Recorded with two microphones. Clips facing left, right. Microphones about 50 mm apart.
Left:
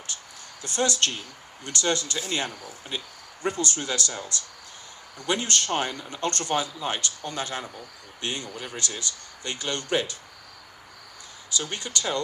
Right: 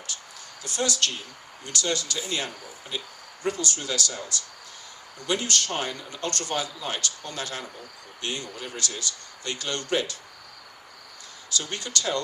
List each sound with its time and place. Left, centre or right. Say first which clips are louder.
0.6 s speech: left 2 dB; left
11.5 s speech: even; left